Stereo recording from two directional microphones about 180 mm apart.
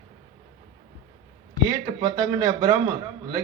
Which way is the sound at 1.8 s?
25° right (ahead or behind).